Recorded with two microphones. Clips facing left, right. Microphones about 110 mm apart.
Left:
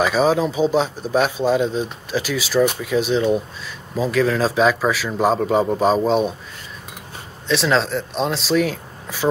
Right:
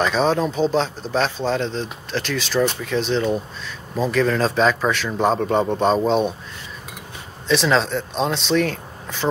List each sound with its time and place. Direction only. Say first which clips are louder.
0.0 s a man's voice: left 2 dB; 5° left (ahead or behind)
7.4 s a man's voice: even; centre (ahead or behind)